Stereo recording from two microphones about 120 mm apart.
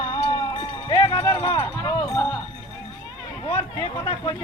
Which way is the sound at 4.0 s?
45° left (ahead or behind).